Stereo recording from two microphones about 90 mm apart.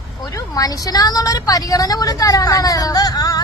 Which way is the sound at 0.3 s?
40° left (ahead or behind).